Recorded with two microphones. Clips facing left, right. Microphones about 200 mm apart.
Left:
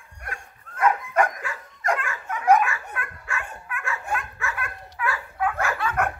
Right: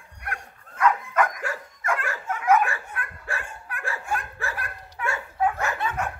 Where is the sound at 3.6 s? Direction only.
35° right (ahead or behind).